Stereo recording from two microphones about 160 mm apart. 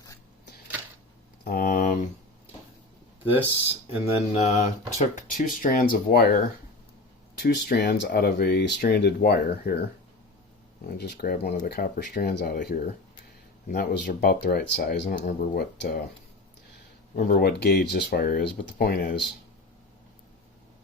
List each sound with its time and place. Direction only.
1.5 s speech: 65° left (ahead or behind)
4.0 s speech: 40° left (ahead or behind)
5.6 s speech: 60° left (ahead or behind)
7.3 s speech: 90° left
10.8 s speech: 90° left
11.5 s speech: 60° left (ahead or behind); by 12.5 s 85° left
12.5 s speech: 60° left (ahead or behind)
13.7 s speech: 80° left
15.1 s speech: 70° left (ahead or behind)
17.2 s speech: 70° left (ahead or behind)